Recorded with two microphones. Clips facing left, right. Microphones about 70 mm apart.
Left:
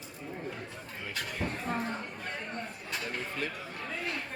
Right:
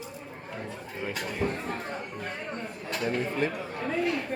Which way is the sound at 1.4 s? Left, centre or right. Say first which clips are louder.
Right 7 dB; centre.